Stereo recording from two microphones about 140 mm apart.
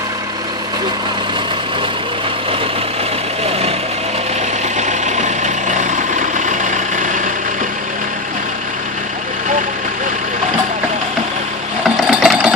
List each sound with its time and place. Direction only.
4.8 s vehicle: 55° right (ahead or behind)
11.9 s sewing machine: 5° right (ahead or behind)